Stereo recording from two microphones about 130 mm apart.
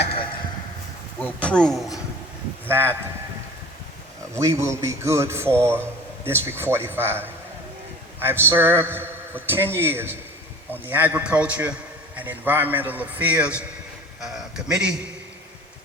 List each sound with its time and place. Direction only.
0.0 s a sound: 45° left (ahead or behind)
1.2 s speech: 10° left (ahead or behind)
2.6 s speech: 15° right (ahead or behind)
4.4 s a man's voice: 20° right (ahead or behind); by 15.0 s 5° right (ahead or behind)